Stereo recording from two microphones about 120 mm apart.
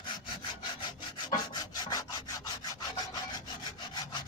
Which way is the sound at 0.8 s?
40° left (ahead or behind).